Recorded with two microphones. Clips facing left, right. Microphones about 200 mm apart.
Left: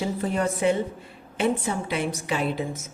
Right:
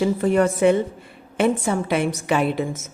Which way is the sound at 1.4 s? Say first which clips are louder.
Right 5 dB; 65° right (ahead or behind).